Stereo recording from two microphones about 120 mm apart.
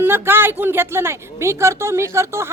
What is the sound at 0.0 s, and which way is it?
A woman's voice, 20° right (ahead or behind).